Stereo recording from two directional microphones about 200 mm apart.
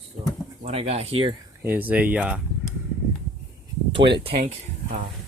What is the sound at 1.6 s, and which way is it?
Speech, 10° right (ahead or behind).